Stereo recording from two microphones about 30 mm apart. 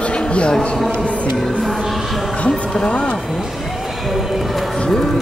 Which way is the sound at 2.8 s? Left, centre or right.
Left.